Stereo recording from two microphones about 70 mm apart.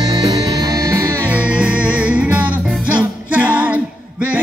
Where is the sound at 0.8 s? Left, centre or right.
Right.